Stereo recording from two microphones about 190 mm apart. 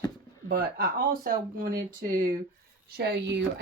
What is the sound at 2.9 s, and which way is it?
Speech, 65° right (ahead or behind).